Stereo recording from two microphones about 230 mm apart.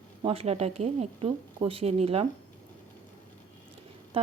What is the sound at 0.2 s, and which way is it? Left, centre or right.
Speech, right.